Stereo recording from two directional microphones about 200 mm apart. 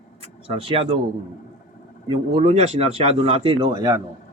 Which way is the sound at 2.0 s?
30° right (ahead or behind).